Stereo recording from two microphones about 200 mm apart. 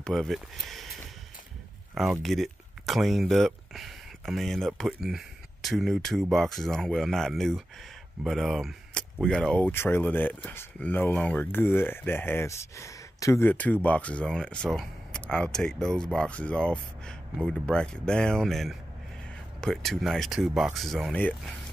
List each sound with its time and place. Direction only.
0.0 s speech: centre (ahead or behind)
2.0 s speech: centre (ahead or behind)